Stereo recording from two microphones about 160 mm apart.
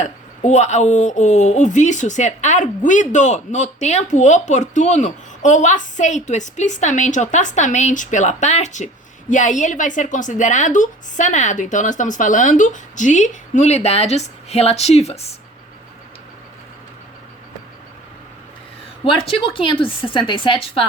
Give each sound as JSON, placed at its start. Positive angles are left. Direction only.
{"t": 0.0, "sound": "speech", "side_deg": 45}
{"t": 19.0, "sound": "a woman's voice", "side_deg": 35}